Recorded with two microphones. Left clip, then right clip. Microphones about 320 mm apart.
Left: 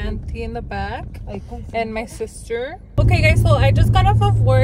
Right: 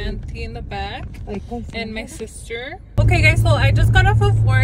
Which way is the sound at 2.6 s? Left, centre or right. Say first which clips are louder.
Left 2 dB; centre.